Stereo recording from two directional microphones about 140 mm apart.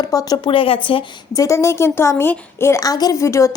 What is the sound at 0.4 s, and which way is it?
Speech, 40° left (ahead or behind).